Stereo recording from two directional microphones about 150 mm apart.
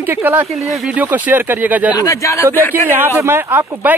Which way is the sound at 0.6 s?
5° right (ahead or behind).